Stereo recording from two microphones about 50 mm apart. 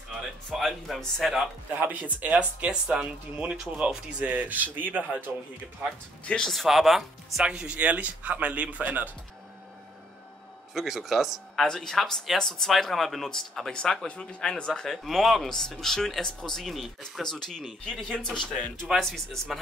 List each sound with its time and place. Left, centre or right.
0.5 s speech: centre
1.8 s speech: right
2.2 s speech: centre; by 5.3 s right
6.4 s speech: centre
7.4 s speech: right
10.7 s speech: centre
11.6 s speech: centre
17.2 s speech: centre